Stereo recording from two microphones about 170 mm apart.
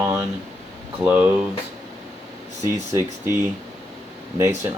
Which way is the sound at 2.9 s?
15° right (ahead or behind).